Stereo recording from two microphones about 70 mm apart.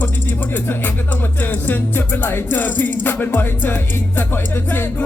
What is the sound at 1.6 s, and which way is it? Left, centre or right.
Music, left.